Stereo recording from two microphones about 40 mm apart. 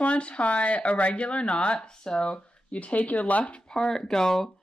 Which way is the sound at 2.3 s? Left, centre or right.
Left.